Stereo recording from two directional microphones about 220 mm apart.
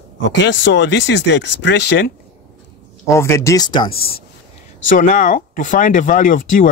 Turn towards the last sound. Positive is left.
turn(degrees=35)  # may be behind; listen again after turning